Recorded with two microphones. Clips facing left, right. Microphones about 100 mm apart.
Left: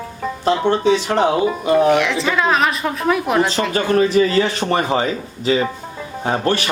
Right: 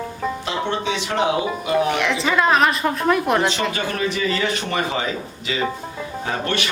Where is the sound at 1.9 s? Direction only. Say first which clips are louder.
Left 4 dB; centre (ahead or behind).